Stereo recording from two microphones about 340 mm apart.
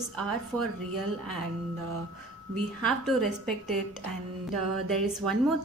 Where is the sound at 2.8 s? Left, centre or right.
Centre.